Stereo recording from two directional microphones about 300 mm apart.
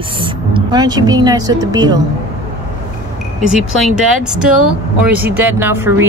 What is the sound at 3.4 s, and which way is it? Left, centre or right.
Speech, centre.